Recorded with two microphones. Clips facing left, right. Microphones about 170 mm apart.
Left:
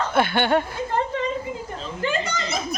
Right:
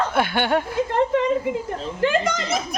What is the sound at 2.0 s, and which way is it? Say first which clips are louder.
Children playing: right 5 dB; 90° right.